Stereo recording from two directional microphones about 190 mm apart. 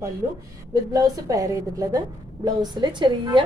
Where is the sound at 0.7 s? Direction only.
15° right (ahead or behind).